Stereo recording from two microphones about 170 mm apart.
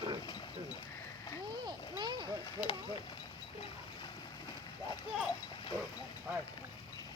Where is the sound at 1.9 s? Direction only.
25° right (ahead or behind).